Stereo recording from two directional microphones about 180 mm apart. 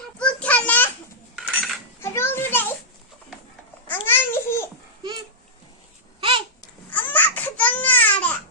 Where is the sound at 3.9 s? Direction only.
10° left (ahead or behind).